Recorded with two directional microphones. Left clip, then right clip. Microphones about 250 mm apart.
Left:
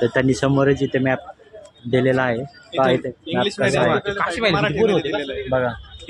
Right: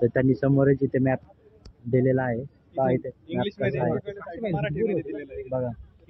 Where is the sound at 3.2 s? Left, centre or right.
Left.